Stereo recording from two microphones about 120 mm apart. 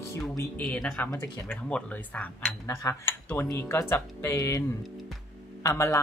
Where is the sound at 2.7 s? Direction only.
25° left (ahead or behind).